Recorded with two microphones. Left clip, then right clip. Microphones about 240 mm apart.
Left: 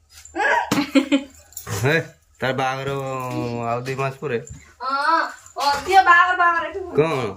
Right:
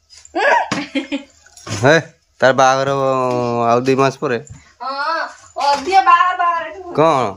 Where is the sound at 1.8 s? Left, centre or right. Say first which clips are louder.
Right 8 dB; right.